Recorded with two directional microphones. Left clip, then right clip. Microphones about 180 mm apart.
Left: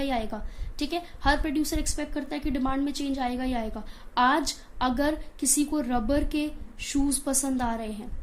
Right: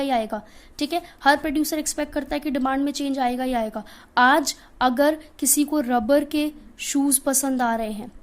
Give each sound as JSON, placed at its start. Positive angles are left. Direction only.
{"t": 0.0, "sound": "a woman's voice", "side_deg": -45}